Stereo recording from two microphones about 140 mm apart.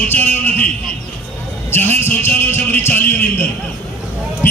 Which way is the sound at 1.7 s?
15° left (ahead or behind).